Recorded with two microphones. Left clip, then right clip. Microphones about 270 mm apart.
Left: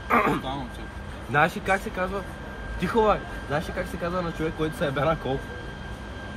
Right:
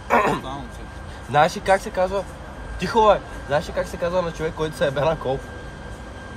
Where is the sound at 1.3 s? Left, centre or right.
Right.